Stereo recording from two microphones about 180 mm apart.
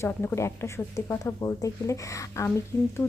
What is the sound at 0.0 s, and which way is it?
A woman's voice, 10° left (ahead or behind).